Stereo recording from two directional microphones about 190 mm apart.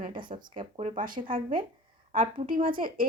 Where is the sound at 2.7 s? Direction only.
45° right (ahead or behind).